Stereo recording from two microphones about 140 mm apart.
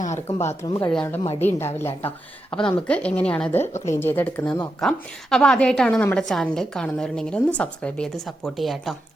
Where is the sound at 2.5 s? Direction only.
5° left (ahead or behind).